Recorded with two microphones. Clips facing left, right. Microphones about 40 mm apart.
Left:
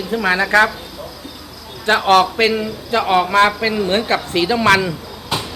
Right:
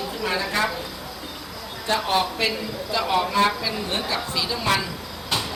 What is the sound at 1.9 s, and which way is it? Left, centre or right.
A man's voice, left.